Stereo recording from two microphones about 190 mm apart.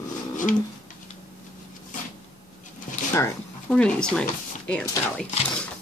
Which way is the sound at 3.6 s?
5° left (ahead or behind).